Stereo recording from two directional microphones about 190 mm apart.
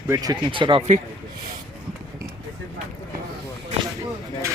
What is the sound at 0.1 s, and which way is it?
Speech, 20° right (ahead or behind).